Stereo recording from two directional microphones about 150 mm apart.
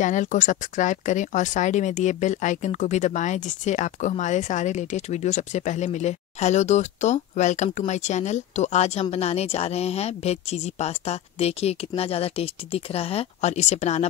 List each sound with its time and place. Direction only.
0.0 s speech: 55° left (ahead or behind)